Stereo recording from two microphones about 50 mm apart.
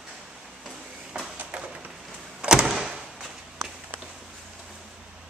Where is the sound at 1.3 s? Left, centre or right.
Right.